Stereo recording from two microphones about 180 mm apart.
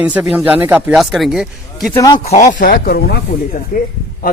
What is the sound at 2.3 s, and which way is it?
Speech, 45° left (ahead or behind).